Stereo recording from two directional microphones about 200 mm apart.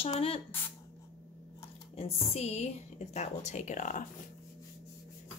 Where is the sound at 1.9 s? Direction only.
30° left (ahead or behind).